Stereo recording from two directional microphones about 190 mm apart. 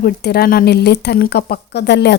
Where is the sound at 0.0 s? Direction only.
55° left (ahead or behind).